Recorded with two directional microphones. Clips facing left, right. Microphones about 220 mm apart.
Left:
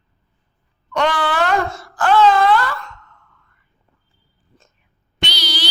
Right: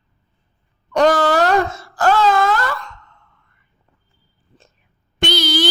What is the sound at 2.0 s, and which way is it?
Wail, 45° right (ahead or behind).